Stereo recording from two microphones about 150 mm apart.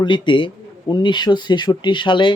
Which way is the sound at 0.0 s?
35° left (ahead or behind).